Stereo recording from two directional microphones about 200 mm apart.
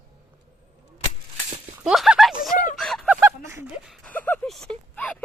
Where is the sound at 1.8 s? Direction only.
5° right (ahead or behind).